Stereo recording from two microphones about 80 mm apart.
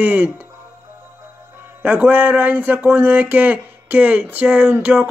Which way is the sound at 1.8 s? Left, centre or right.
Right.